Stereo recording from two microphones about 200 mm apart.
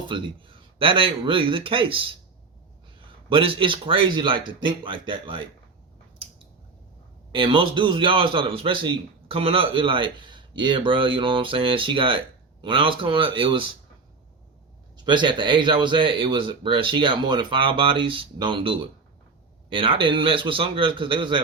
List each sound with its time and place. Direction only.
0.1 s speech: 25° right (ahead or behind)
3.2 s speech: 25° right (ahead or behind)
7.3 s speech: 25° right (ahead or behind)
14.9 s speech: 25° right (ahead or behind)